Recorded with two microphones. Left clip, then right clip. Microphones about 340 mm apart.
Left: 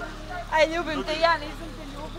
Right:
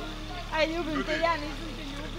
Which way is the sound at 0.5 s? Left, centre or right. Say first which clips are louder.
Left 6 dB; left.